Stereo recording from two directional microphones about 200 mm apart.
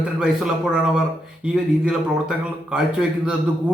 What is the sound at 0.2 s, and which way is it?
Speech, 5° right (ahead or behind).